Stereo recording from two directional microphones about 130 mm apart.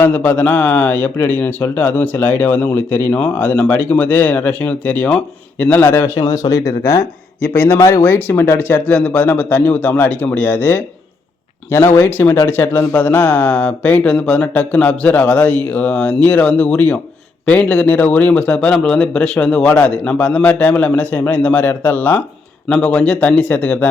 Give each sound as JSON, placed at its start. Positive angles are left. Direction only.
{"t": 0.0, "sound": "a man's voice", "side_deg": 15}